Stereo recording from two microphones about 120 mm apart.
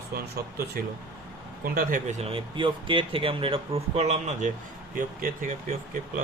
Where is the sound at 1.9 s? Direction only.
80° right.